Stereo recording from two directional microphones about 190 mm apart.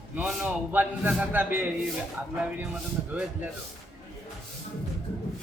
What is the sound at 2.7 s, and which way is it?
Speech, 5° right (ahead or behind).